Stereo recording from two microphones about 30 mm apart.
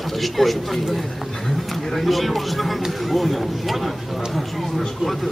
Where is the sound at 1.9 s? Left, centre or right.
Centre.